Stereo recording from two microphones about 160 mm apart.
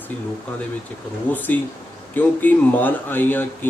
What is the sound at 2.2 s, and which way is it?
Speech, 10° left (ahead or behind).